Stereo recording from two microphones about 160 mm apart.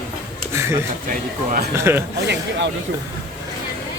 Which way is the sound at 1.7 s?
15° right (ahead or behind).